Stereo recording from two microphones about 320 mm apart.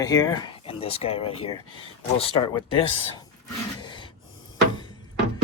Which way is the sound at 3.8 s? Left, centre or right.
Centre.